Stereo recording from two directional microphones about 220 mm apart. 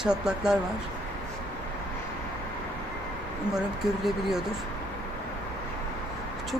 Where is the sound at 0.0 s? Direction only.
5° right (ahead or behind).